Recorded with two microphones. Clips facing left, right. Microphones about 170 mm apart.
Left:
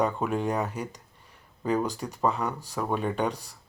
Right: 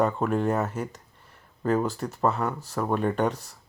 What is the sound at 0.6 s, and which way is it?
Speech, 15° left (ahead or behind).